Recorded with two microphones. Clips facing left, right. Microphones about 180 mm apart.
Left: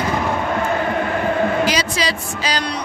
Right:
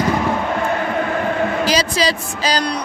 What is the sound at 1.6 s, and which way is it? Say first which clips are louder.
Music: right 3 dB; 35° right (ahead or behind).